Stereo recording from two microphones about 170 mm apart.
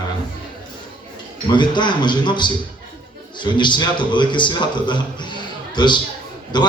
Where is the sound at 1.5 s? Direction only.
25° left (ahead or behind).